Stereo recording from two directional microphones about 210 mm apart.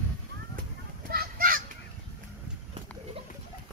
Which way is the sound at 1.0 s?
45° right (ahead or behind).